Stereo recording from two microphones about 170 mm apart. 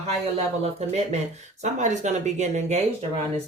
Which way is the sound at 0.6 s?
40° right (ahead or behind).